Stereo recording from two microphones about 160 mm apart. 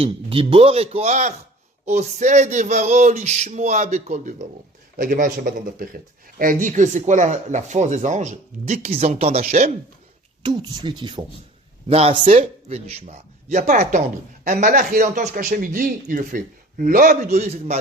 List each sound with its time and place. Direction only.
0.0 s speech: 35° right (ahead or behind)
4.9 s a man's voice: 60° right (ahead or behind); by 9.6 s 40° right (ahead or behind)
10.4 s speech: 25° right (ahead or behind)
11.9 s a man's voice: 40° right (ahead or behind); by 17.2 s 60° right (ahead or behind)
17.2 s speech: 45° right (ahead or behind)